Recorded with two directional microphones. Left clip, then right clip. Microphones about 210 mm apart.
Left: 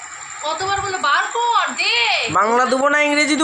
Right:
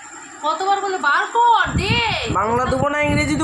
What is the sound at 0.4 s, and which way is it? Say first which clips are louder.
A woman's voice: right 2 dB; 15° right (ahead or behind).